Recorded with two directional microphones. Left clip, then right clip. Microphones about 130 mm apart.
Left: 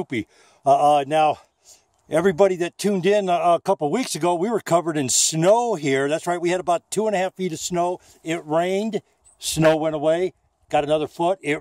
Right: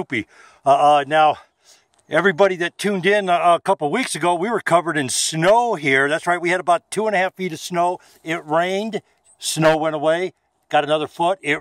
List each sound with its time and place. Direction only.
0.0 s a man's voice: 15° left (ahead or behind); by 11.5 s 40° left (ahead or behind)